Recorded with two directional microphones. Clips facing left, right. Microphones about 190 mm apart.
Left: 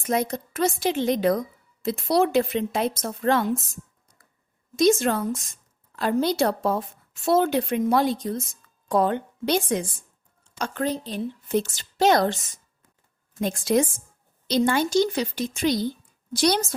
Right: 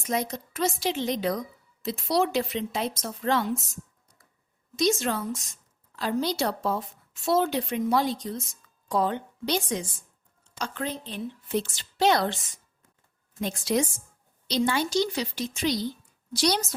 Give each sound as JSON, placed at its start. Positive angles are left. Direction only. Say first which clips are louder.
{"t": 0.0, "sound": "a woman's voice", "louder": "left 4 dB", "side_deg": 55}
{"t": 4.8, "sound": "a woman's voice", "louder": "left 6 dB", "side_deg": 50}
{"t": 10.6, "sound": "a woman's voice", "louder": "left 6 dB", "side_deg": 40}
{"t": 13.4, "sound": "a woman's voice", "louder": "left 4 dB", "side_deg": 50}